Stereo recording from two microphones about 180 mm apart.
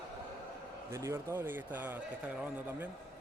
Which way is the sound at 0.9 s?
15° right (ahead or behind).